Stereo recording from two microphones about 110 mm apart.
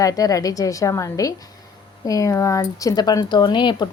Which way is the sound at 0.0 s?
30° left (ahead or behind).